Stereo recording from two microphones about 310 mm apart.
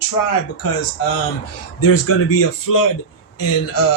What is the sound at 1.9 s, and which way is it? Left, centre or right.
Speech, left.